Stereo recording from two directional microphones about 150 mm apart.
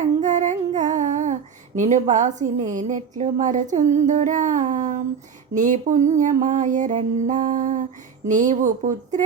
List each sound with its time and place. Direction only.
0.0 s female singing: 55° right (ahead or behind)
5.5 s music: 55° right (ahead or behind)